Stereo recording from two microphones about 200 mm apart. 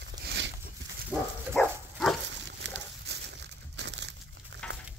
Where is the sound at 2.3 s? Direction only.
60° right (ahead or behind).